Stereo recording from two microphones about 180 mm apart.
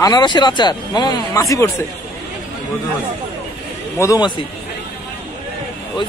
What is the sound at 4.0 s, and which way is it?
Speech, 20° left (ahead or behind).